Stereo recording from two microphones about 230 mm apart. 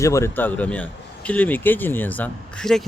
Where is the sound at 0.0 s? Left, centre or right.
Centre.